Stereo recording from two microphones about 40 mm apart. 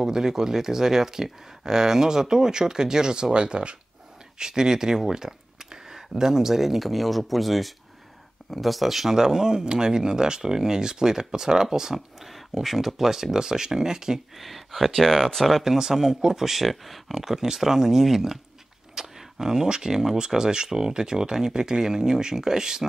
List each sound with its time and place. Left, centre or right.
0.0 s speech: centre
14.3 s speech: centre
15.6 s speech: centre